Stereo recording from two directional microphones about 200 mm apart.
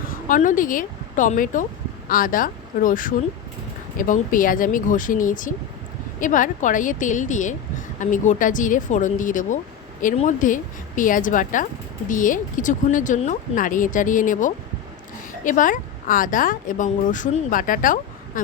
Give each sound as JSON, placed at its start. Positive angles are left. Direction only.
{"t": 0.1, "sound": "speech", "side_deg": 40}